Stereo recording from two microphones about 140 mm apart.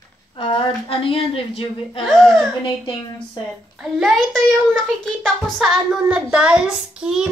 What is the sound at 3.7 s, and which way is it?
Child singing, centre (ahead or behind).